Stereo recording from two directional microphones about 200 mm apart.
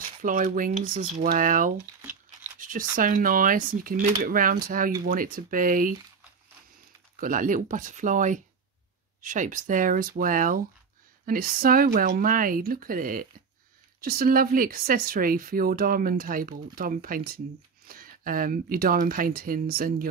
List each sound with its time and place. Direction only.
0.2 s speech: 40° right (ahead or behind)
2.0 s crumpling: 10° right (ahead or behind)
2.6 s speech: 45° right (ahead or behind)
7.2 s speech: 40° right (ahead or behind)